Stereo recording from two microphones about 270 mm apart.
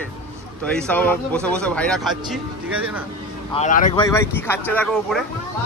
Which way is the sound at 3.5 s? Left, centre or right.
Left.